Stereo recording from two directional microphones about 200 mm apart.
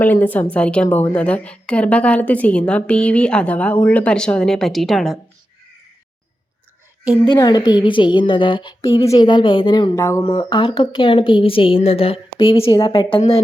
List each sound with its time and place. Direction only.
0.0 s a woman's voice: 10° left (ahead or behind)
7.3 s a woman's voice: 20° left (ahead or behind)
10.2 s a woman's voice: 25° left (ahead or behind)